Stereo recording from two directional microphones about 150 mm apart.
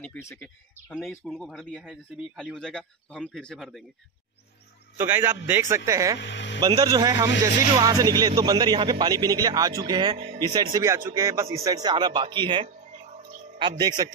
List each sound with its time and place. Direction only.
0.2 s speech: 20° left (ahead or behind)
0.9 s speech: centre (ahead or behind)
4.9 s a man's voice: 15° right (ahead or behind)